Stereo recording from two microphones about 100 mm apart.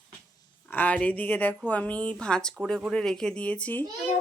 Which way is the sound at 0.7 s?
15° left (ahead or behind).